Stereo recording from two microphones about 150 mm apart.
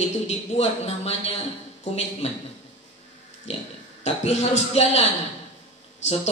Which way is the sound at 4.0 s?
45° left (ahead or behind).